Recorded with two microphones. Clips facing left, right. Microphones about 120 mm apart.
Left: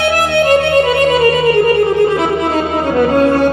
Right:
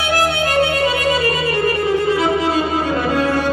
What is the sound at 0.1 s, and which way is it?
Music, 55° left (ahead or behind).